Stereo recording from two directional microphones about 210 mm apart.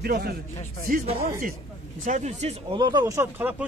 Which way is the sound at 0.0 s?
50° right (ahead or behind).